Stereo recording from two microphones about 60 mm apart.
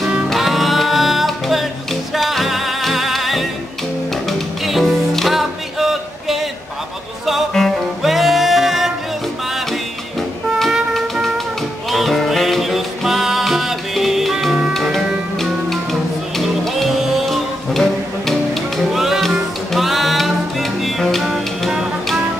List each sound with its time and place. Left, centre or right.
0.3 s music: centre
7.6 s music: centre
8.0 s music: centre
10.7 s music: centre